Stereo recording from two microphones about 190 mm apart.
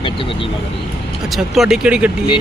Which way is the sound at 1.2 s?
Centre (ahead or behind).